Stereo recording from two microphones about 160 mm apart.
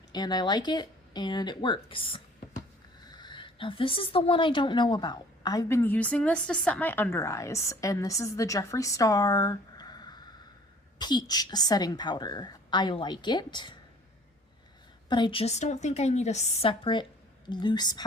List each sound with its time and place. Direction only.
0.1 s a woman's voice: 25° left (ahead or behind)
15.1 s a woman's voice: 30° left (ahead or behind)